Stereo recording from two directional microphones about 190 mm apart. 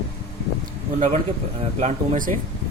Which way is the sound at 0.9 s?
35° right (ahead or behind).